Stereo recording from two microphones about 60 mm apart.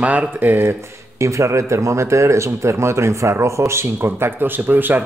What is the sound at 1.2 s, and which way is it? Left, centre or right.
Speech, right.